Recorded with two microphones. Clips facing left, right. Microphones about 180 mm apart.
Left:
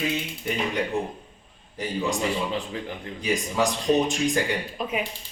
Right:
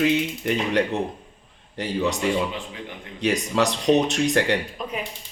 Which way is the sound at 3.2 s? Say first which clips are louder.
Right 3 dB; 70° right (ahead or behind).